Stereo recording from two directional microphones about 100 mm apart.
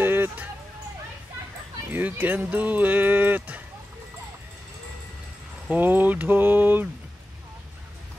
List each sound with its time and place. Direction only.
0.0 s music: 20° right (ahead or behind)
1.9 s speech: 20° right (ahead or behind)
5.7 s a sound: 20° right (ahead or behind)